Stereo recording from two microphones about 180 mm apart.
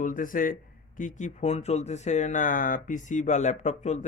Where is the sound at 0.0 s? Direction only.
50° left (ahead or behind).